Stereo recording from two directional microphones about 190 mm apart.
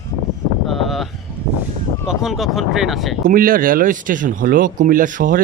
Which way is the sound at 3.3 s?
50° right (ahead or behind).